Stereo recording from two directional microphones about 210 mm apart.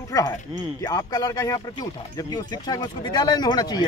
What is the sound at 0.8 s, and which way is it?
Speech, 15° left (ahead or behind).